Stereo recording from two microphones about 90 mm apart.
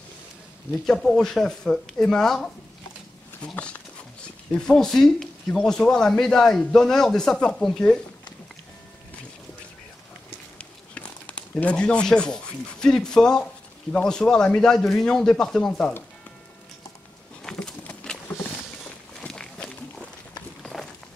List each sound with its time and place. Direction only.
0.8 s a man's voice: 5° left (ahead or behind)
10.6 s a man's voice: 15° left (ahead or behind)
17.4 s a sound: 10° left (ahead or behind)
18.3 s vehicle: 20° left (ahead or behind)
19.2 s walk: 10° left (ahead or behind)
20.6 s a sound: 5° left (ahead or behind)